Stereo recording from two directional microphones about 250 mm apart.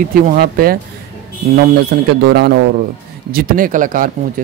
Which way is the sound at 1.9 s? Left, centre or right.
Right.